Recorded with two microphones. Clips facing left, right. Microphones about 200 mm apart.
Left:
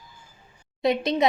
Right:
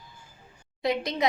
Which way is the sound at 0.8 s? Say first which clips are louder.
Left 5 dB; 25° left (ahead or behind).